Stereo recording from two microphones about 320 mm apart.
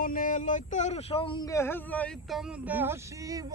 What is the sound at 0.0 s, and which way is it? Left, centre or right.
Speech, left.